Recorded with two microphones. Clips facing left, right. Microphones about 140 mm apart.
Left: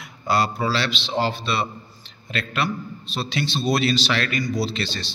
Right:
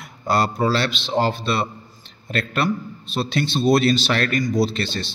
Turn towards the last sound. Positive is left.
turn(degrees=-50)  # may be behind; listen again after turning